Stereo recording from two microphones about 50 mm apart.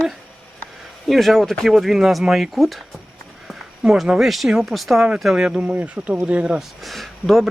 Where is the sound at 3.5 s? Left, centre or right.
Centre.